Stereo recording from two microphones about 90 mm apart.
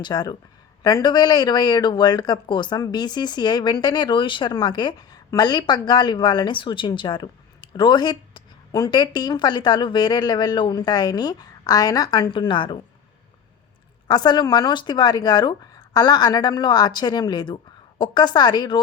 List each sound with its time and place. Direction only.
0.0 s speech: 50° left (ahead or behind)
14.1 s speech: 55° left (ahead or behind)